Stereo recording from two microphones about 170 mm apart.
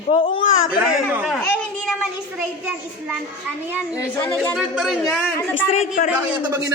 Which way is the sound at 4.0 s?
15° left (ahead or behind).